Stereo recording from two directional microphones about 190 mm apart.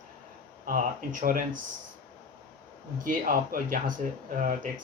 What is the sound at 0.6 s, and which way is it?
Speech, 45° right (ahead or behind).